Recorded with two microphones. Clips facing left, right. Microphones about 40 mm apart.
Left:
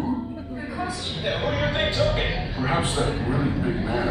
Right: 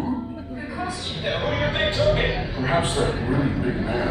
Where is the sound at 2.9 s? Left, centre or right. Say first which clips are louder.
Right 2 dB; centre.